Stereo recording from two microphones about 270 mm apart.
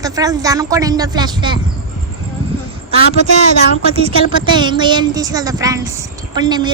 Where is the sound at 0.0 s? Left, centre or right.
Centre.